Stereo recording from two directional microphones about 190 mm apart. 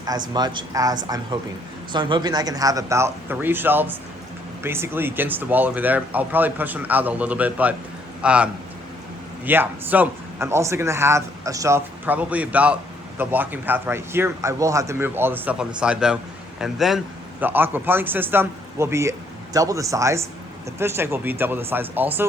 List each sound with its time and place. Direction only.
0.3 s a man's voice: 20° right (ahead or behind); by 8.4 s 5° right (ahead or behind)
9.5 s a man's voice: 10° right (ahead or behind)